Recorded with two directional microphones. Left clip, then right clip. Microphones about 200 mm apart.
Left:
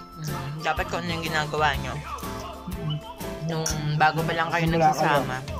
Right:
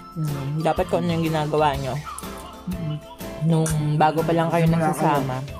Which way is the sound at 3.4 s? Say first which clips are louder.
Right 6 dB; 20° right (ahead or behind).